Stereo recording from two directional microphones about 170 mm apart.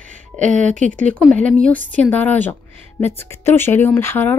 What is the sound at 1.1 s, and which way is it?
Speech, 5° left (ahead or behind).